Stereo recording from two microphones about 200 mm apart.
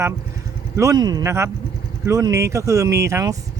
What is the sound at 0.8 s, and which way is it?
Speech, 20° right (ahead or behind).